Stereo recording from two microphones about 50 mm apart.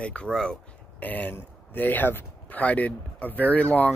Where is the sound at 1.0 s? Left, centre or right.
Left.